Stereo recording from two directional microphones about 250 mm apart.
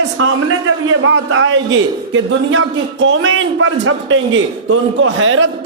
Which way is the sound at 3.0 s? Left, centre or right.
Right.